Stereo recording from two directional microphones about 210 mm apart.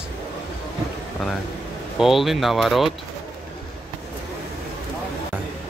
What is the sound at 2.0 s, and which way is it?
Speech, centre (ahead or behind).